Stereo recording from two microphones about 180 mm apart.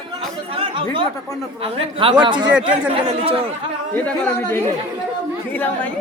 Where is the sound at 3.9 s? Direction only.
10° left (ahead or behind).